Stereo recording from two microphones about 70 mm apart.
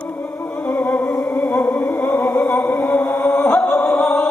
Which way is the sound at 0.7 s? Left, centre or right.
Left.